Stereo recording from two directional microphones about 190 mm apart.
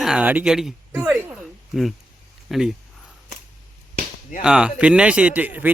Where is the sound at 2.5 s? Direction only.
Centre (ahead or behind).